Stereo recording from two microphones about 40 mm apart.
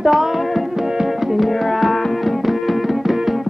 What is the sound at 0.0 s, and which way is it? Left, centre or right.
Music, centre.